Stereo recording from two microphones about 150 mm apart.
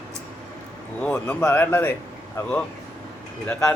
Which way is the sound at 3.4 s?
15° left (ahead or behind).